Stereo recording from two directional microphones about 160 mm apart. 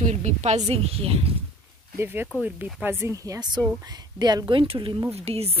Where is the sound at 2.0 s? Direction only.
15° right (ahead or behind).